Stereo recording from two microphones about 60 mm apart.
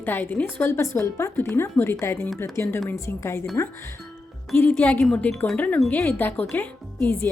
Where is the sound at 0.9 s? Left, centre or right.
Left.